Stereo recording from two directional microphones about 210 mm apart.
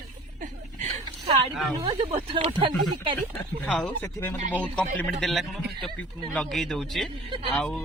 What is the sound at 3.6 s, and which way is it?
Speech, 5° left (ahead or behind).